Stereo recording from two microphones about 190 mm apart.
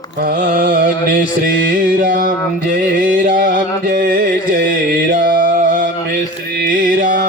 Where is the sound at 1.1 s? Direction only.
50° right (ahead or behind).